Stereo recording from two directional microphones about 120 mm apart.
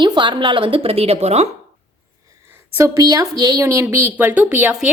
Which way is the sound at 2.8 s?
30° right (ahead or behind).